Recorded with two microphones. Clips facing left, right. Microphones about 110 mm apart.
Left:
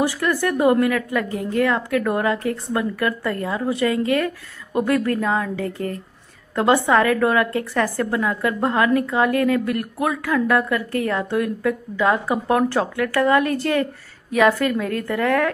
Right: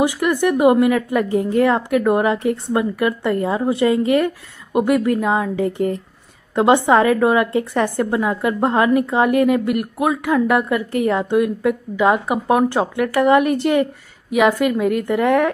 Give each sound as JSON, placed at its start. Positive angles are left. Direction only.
{"t": 0.0, "sound": "a woman's voice", "side_deg": -20}
{"t": 4.7, "sound": "a woman's voice", "side_deg": -15}